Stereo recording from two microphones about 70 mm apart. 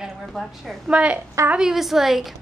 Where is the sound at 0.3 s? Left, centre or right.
Centre.